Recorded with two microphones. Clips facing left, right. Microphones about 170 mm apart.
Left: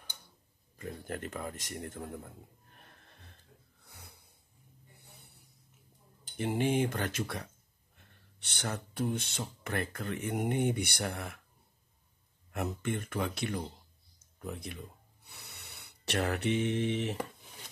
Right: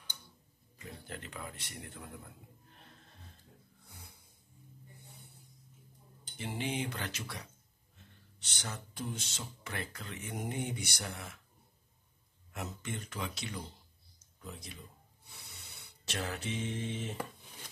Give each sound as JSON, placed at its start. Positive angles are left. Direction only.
{"t": 0.7, "sound": "speech", "side_deg": 50}
{"t": 3.8, "sound": "snort", "side_deg": 70}
{"t": 6.3, "sound": "speech", "side_deg": 50}
{"t": 12.5, "sound": "speech", "side_deg": 55}